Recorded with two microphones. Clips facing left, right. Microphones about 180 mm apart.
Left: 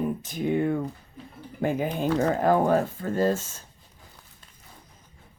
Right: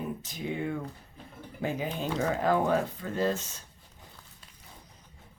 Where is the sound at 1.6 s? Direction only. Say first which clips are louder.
Left 6 dB; 50° left (ahead or behind).